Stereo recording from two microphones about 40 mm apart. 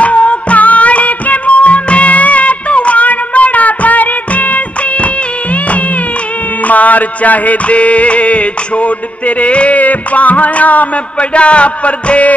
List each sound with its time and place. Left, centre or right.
0.0 s music: left